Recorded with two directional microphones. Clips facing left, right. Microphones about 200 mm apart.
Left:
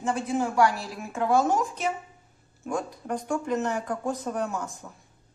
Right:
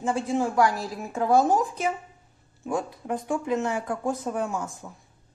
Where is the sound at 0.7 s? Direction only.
40° right (ahead or behind).